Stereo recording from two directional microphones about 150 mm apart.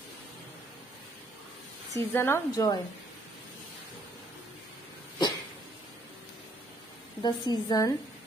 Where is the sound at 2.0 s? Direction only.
15° left (ahead or behind).